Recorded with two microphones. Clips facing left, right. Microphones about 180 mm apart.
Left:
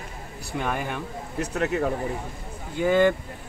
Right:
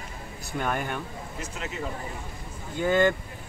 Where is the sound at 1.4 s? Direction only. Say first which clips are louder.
Left 11 dB; 65° left (ahead or behind).